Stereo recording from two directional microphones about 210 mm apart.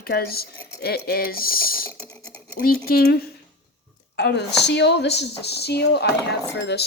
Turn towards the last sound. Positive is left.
turn(degrees=55)  # may be behind; listen again after turning